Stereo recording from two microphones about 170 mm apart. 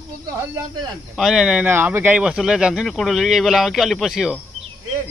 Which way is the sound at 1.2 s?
5° right (ahead or behind).